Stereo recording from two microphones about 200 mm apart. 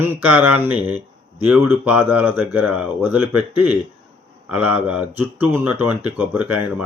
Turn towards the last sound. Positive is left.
turn(degrees=-5)  # may be behind; listen again after turning